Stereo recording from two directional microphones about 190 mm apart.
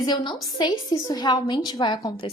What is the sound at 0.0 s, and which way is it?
A woman's voice, 25° left (ahead or behind).